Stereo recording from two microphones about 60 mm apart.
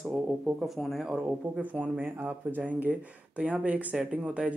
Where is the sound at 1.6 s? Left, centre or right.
Right.